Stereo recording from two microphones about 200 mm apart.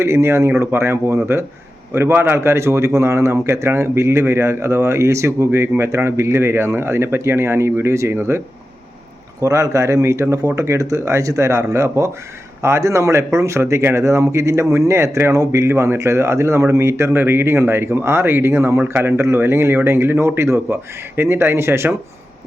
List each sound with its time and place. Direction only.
0.0 s a man's voice: 15° right (ahead or behind)
9.4 s a man's voice: 15° right (ahead or behind)